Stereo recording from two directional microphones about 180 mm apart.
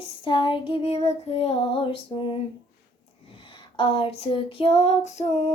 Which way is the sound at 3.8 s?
30° left (ahead or behind).